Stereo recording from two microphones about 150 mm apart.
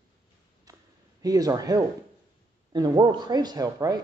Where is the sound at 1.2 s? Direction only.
25° right (ahead or behind).